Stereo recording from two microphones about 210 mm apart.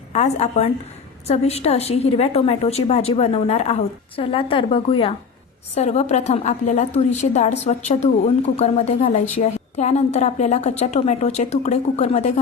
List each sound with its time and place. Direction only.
0.1 s a woman's voice: 30° left (ahead or behind)